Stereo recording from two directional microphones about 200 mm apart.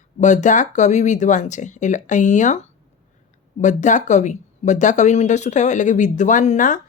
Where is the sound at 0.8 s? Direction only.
35° left (ahead or behind).